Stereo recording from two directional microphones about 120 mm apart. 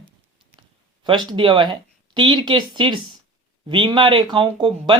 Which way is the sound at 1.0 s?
40° right (ahead or behind).